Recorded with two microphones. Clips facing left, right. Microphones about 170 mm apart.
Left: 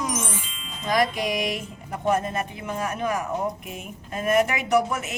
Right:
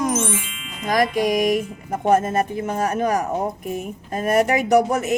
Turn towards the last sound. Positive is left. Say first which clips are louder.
# right 6 dB
turn(degrees=-40)  # may be behind; listen again after turning